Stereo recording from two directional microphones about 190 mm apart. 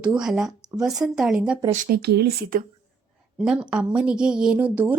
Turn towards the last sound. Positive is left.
turn(degrees=-10)  # may be behind; listen again after turning